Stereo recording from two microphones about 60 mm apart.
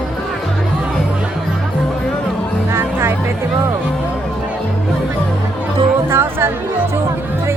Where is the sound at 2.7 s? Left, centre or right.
Right.